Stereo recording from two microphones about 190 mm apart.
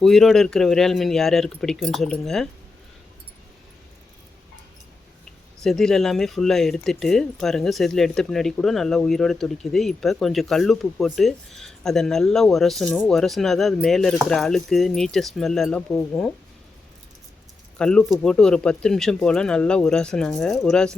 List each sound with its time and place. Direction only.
0.0 s speech: centre (ahead or behind)
5.6 s speech: centre (ahead or behind)
17.7 s speech: 5° left (ahead or behind)